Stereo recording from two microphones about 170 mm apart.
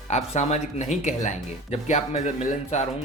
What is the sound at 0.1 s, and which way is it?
Speech, 40° left (ahead or behind).